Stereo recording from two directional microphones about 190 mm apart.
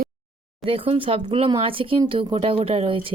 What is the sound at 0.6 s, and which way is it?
Speech, 30° right (ahead or behind).